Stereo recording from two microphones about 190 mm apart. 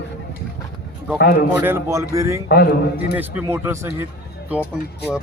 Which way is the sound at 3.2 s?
10° right (ahead or behind).